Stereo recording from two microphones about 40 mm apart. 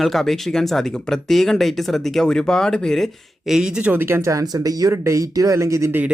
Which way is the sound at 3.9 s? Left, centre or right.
Right.